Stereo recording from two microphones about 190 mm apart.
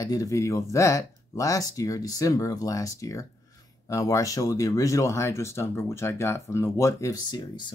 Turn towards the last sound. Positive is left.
turn(degrees=20)  # may be behind; listen again after turning